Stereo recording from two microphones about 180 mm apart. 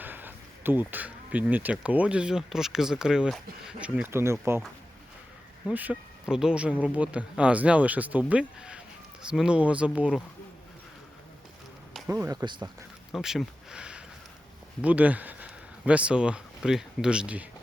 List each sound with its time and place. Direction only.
0.0 s speech: 10° right (ahead or behind)
5.6 s speech: 10° right (ahead or behind)
12.0 s speech: 15° right (ahead or behind)
13.1 s speech: centre (ahead or behind)